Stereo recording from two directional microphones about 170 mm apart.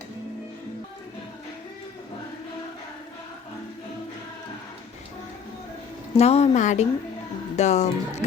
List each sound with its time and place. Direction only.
6.1 s speech: 40° left (ahead or behind)